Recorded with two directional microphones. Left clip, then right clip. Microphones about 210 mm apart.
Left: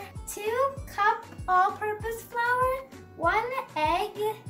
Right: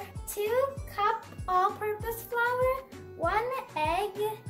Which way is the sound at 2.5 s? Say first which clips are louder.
Left 5 dB; centre (ahead or behind).